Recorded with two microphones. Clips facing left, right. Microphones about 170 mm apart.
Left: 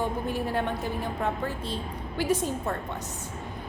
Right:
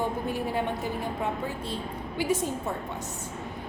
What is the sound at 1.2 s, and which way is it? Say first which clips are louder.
A woman's voice: left 1 dB; 15° right (ahead or behind).